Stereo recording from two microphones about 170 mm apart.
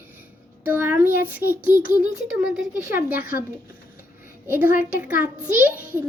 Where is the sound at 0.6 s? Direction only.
10° right (ahead or behind).